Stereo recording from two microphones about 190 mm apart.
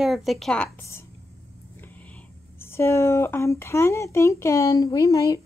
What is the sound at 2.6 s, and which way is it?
Speech, 15° left (ahead or behind).